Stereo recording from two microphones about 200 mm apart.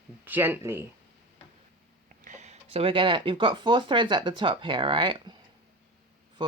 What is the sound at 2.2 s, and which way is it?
Speech, 35° right (ahead or behind).